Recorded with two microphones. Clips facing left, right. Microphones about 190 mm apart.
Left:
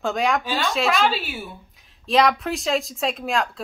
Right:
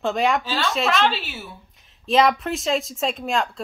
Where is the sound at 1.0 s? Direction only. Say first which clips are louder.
Left 1 dB; 10° left (ahead or behind).